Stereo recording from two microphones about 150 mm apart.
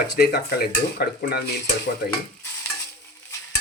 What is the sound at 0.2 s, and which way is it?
Speech, 90° left.